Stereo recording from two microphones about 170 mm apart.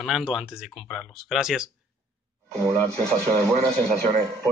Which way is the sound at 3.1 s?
5° left (ahead or behind).